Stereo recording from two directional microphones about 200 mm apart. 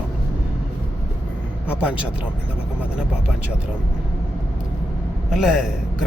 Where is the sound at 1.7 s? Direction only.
5° right (ahead or behind).